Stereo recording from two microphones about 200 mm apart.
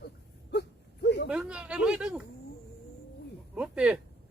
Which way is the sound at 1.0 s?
60° left (ahead or behind).